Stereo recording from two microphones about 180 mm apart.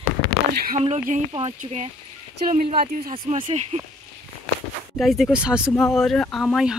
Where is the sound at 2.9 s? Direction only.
50° right (ahead or behind).